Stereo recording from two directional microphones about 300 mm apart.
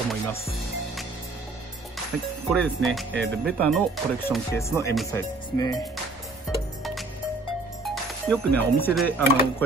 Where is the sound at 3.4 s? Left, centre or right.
Centre.